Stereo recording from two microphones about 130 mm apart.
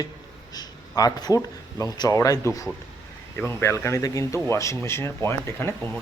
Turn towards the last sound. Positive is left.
turn(degrees=20)  # may be behind; listen again after turning